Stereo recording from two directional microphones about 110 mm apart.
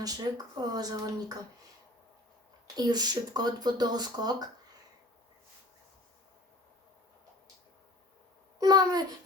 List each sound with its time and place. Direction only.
0.0 s speech: 35° right (ahead or behind)
2.7 s speech: 35° right (ahead or behind)
8.5 s a child's voice: 35° right (ahead or behind)